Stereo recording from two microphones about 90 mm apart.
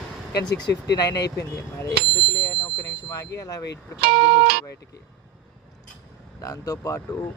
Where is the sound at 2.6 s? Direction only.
45° left (ahead or behind).